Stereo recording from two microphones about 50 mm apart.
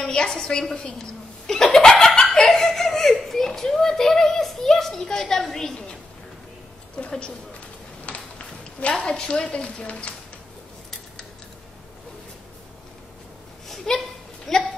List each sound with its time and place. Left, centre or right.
0.0 s a sound: centre
0.5 s a child's voice: centre
7.1 s a woman's voice: left
8.7 s a woman's voice: left
13.9 s a child's voice: centre